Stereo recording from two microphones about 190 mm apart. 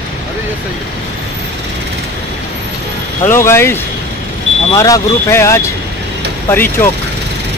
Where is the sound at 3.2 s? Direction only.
15° left (ahead or behind).